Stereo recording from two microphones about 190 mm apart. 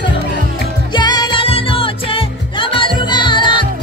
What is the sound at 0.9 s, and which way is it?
Music, 20° left (ahead or behind).